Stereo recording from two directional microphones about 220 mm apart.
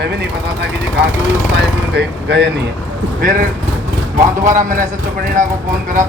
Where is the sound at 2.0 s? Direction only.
50° right (ahead or behind).